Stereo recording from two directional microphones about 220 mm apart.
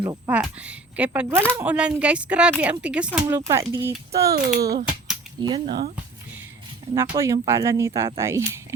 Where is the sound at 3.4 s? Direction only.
15° right (ahead or behind).